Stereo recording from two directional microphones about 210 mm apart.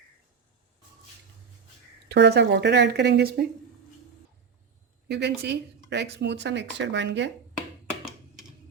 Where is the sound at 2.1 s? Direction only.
50° right (ahead or behind).